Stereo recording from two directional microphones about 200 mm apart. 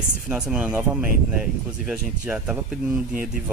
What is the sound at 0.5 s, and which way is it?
Speech, 5° right (ahead or behind).